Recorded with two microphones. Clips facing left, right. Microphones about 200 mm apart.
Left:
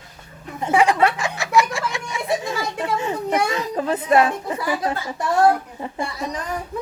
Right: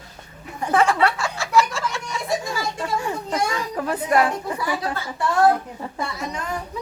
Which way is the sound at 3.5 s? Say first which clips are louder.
Left 3 dB; 25° left (ahead or behind).